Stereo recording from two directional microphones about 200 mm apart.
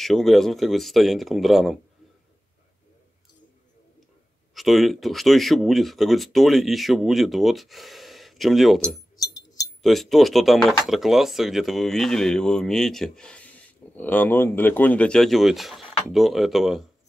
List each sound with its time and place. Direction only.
0.0 s speech: centre (ahead or behind)
4.6 s speech: centre (ahead or behind)
9.1 s chink: 20° left (ahead or behind)
9.8 s speech: centre (ahead or behind)